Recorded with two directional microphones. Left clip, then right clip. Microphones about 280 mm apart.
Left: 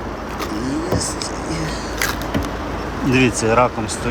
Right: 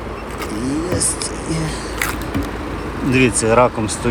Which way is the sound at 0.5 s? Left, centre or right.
Centre.